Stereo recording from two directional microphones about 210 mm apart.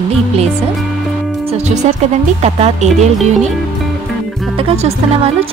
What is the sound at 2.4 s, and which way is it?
Speech, 30° right (ahead or behind).